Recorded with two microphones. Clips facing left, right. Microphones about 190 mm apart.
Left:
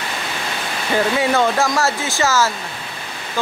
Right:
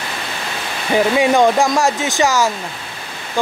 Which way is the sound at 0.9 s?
15° right (ahead or behind).